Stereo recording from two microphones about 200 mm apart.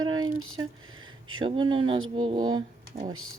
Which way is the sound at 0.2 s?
90° right.